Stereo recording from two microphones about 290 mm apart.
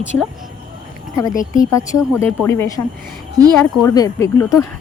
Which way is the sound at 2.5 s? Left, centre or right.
Centre.